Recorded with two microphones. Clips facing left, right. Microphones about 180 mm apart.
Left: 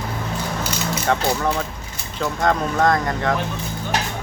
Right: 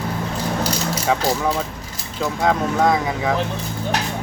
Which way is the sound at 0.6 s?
35° right (ahead or behind).